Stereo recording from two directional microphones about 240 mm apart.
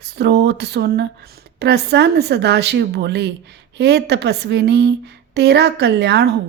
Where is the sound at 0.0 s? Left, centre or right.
Right.